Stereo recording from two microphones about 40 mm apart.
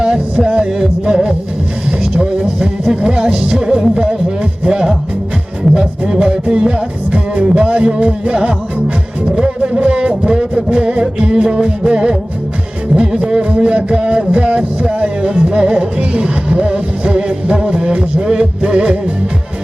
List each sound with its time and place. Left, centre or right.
0.0 s music: centre; by 8.3 s right
8.3 s music: centre
9.6 s a sound: right
10.8 s music: right
13.0 s a sound: centre
15.6 s music: right